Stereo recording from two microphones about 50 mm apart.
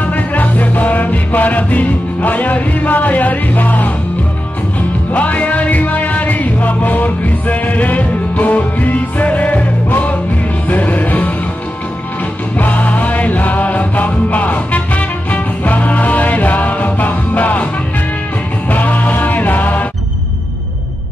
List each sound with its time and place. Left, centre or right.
0.0 s music: left
5.1 s music: left
12.5 s music: left
18.7 s music: left